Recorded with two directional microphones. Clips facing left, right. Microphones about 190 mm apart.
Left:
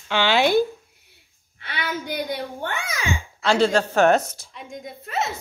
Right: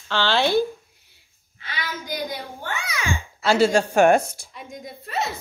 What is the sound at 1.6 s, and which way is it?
A child's voice, 60° left (ahead or behind).